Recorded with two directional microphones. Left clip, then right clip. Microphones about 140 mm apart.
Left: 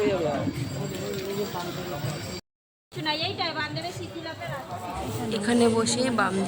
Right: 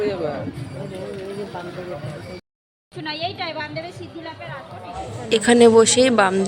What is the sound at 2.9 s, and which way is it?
Speech, 25° right (ahead or behind).